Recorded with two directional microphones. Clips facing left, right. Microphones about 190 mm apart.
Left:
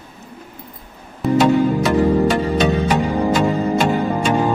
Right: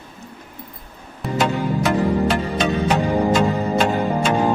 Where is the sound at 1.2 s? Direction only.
Centre (ahead or behind).